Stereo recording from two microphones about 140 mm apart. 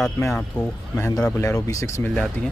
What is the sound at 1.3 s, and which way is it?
Speech, 20° left (ahead or behind).